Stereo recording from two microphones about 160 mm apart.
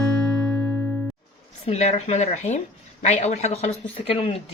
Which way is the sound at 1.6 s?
40° left (ahead or behind).